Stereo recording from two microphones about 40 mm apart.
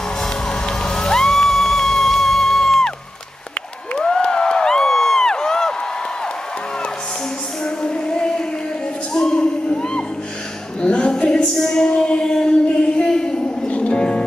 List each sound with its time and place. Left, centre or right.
0.2 s music: centre
4.2 s crowd: left
7.6 s music: left
9.1 s a sound: centre
11.5 s music: centre
11.9 s a sound: left
13.7 s music: left